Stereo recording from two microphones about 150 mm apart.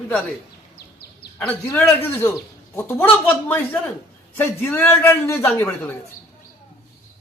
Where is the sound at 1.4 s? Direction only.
20° left (ahead or behind).